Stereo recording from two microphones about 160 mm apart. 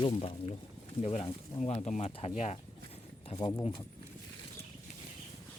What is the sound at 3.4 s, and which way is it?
Speech, 20° left (ahead or behind).